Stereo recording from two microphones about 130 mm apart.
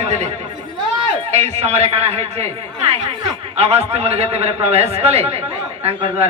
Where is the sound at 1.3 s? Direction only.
55° right (ahead or behind).